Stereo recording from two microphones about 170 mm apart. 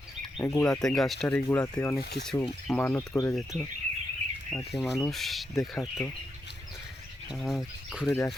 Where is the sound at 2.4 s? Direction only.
5° left (ahead or behind).